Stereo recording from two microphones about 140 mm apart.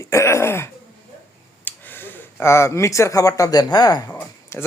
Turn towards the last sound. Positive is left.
turn(degrees=15)  # may be behind; listen again after turning